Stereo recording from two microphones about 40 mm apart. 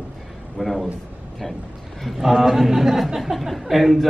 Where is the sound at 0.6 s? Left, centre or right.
Centre.